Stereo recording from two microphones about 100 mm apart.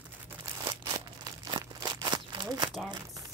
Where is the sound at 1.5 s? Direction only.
45° right (ahead or behind).